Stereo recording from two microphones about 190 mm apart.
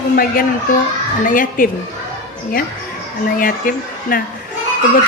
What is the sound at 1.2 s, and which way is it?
Speech, 45° left (ahead or behind).